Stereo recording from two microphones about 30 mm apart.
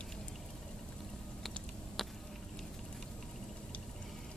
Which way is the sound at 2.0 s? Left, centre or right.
Centre.